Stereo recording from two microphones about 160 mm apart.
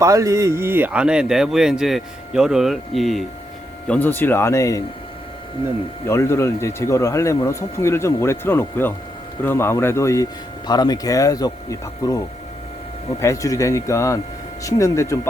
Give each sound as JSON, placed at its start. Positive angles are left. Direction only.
{"t": 0.0, "sound": "speech", "side_deg": -20}
{"t": 6.1, "sound": "speech", "side_deg": 15}